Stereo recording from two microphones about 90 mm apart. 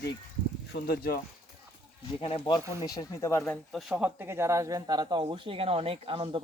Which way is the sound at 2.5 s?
65° left (ahead or behind).